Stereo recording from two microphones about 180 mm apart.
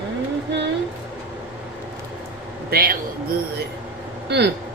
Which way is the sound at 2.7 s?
55° right (ahead or behind).